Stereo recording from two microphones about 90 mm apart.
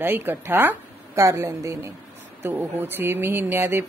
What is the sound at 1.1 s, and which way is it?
Speech, 35° right (ahead or behind).